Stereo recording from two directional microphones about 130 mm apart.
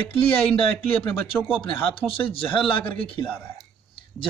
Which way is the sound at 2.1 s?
45° left (ahead or behind).